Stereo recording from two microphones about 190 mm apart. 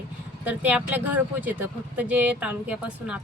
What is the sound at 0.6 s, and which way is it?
Speech, 10° right (ahead or behind).